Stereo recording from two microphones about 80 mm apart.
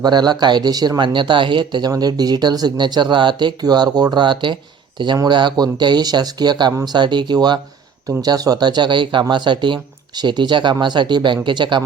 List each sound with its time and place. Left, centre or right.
0.0 s speech: right
1.9 s speech: right
5.3 s speech: right
8.2 s speech: right
9.3 s speech: right